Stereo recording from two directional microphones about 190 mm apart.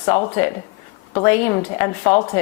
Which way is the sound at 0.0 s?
20° left (ahead or behind).